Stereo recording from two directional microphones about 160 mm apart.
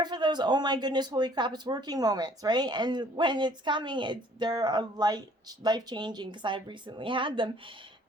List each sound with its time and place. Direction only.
0.0 s a woman's voice: 25° right (ahead or behind)